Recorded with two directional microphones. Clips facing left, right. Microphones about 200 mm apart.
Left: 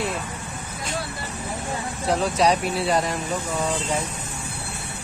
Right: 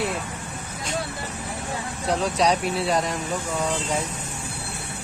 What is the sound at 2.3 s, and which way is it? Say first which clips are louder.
Speech: left 1 dB; centre (ahead or behind).